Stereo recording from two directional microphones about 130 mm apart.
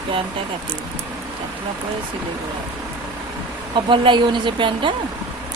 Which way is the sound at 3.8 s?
40° right (ahead or behind).